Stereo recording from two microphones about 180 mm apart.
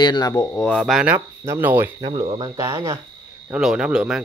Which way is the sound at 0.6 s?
Centre (ahead or behind).